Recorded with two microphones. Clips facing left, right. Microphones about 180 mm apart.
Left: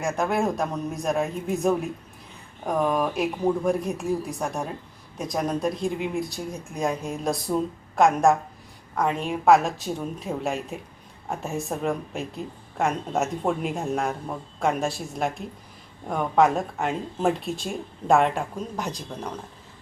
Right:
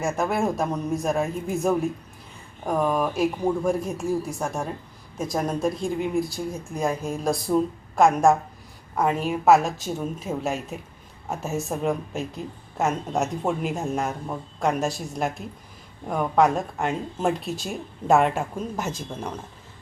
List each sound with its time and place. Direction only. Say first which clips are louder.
0.0 s a woman's voice: even; centre (ahead or behind)